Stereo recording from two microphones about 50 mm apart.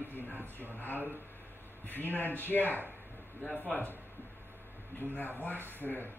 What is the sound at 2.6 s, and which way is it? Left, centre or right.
Speech, right.